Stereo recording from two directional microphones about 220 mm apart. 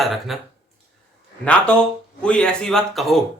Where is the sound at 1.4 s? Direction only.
5° left (ahead or behind).